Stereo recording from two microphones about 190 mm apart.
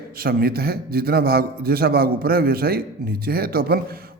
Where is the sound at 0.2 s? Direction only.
50° right (ahead or behind).